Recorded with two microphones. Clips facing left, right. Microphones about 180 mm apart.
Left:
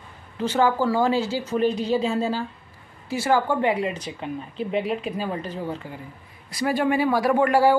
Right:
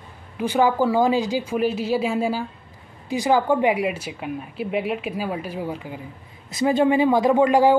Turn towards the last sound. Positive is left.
turn(degrees=-15)  # may be behind; listen again after turning